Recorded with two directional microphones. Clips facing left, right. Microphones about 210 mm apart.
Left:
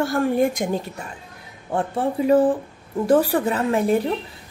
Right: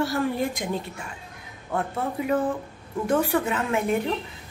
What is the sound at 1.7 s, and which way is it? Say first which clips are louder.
A woman's voice: left 5 dB; 30° left (ahead or behind).